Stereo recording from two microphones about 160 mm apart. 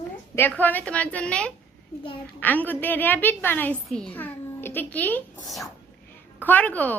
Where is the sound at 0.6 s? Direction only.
10° left (ahead or behind).